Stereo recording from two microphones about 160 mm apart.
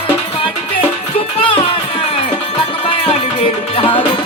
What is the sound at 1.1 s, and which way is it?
Music, 35° left (ahead or behind).